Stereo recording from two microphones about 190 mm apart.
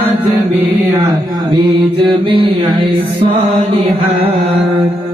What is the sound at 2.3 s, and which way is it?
Mantra, 30° right (ahead or behind).